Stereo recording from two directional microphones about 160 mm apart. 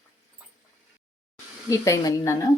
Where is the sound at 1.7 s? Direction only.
20° left (ahead or behind).